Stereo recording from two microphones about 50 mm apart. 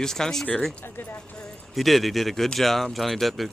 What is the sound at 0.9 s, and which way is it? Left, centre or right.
Speech, left.